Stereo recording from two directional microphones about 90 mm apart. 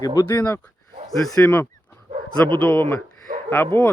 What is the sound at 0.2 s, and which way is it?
Speech, 30° left (ahead or behind).